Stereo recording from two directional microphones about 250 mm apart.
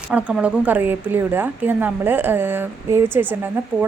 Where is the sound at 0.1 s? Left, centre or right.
Centre.